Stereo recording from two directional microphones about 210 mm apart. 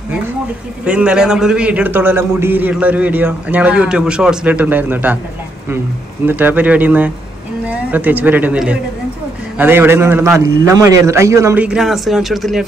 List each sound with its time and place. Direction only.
0.8 s a man's voice: 5° right (ahead or behind)
6.2 s a man's voice: 10° right (ahead or behind)